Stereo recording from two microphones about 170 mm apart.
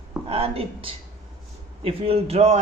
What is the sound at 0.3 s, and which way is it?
A woman's voice, 35° right (ahead or behind).